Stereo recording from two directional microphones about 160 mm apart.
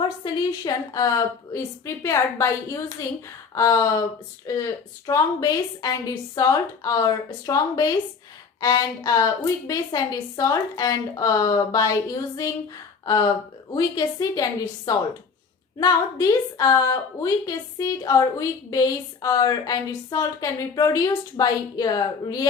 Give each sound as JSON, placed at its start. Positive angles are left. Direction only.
{"t": 0.3, "sound": "a woman's voice", "side_deg": 25}